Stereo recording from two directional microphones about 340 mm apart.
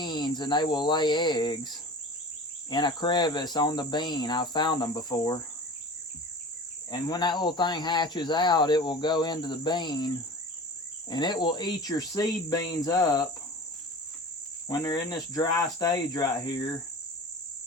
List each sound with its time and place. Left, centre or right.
0.0 s speech: centre
6.9 s speech: centre
11.1 s speech: centre
14.7 s speech: centre